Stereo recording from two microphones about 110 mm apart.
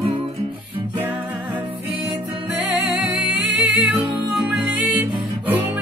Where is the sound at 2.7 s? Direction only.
5° right (ahead or behind).